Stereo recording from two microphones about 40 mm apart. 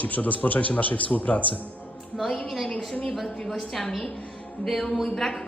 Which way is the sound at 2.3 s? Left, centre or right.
Centre.